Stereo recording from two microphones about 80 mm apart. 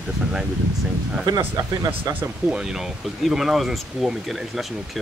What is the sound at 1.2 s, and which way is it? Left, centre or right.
Speech, right.